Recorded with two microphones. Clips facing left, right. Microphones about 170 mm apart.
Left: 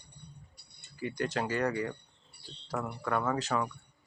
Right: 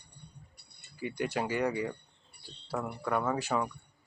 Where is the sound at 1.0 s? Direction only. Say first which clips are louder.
Even; 10° right (ahead or behind).